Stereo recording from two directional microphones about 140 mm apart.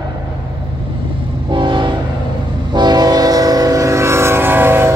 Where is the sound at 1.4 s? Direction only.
35° right (ahead or behind).